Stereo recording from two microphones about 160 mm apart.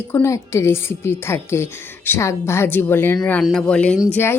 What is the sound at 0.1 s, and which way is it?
A woman's voice, 15° left (ahead or behind).